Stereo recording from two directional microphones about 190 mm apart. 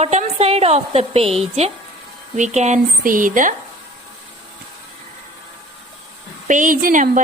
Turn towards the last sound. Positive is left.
turn(degrees=-45)  # may be behind; listen again after turning